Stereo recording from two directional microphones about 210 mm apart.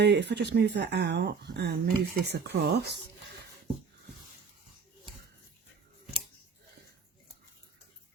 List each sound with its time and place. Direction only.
0.0 s speech: 55° right (ahead or behind)